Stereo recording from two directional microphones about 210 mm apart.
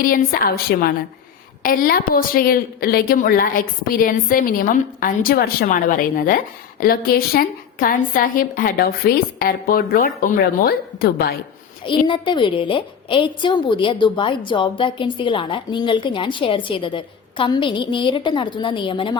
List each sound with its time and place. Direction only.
0.0 s a woman's voice: 40° left (ahead or behind)
12.0 s a woman's voice: 25° left (ahead or behind)